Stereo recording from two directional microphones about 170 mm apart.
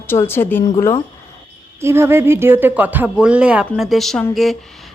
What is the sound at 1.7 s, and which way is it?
Speech, 15° right (ahead or behind).